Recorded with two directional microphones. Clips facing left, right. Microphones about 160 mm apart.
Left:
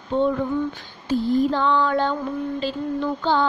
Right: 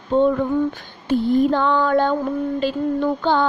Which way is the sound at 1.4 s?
55° right (ahead or behind).